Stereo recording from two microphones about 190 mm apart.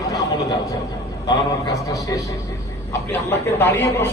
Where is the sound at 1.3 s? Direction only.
20° left (ahead or behind).